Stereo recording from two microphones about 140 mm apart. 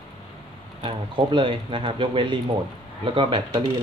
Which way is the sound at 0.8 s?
40° right (ahead or behind).